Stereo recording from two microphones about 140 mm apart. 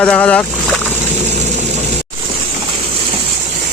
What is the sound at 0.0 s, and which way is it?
Speech, 10° left (ahead or behind).